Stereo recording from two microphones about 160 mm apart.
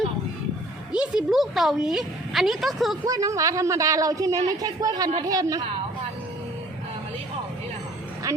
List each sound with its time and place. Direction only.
0.9 s a woman's voice: 5° right (ahead or behind)
3.0 s a woman's voice: 20° right (ahead or behind)
8.3 s a sound: 20° right (ahead or behind)